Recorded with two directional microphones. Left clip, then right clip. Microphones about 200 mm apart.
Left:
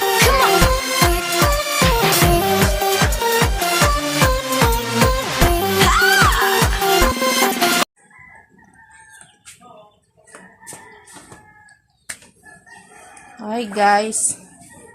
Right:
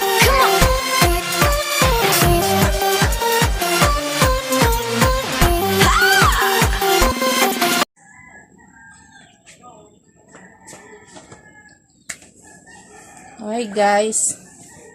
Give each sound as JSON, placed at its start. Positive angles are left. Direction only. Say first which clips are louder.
{"t": 0.0, "sound": "music", "louder": "even", "side_deg": 0}
{"t": 13.4, "sound": "a sound", "louder": "right 1 dB", "side_deg": 20}
{"t": 13.7, "sound": "a woman's voice", "louder": "left 1 dB", "side_deg": 20}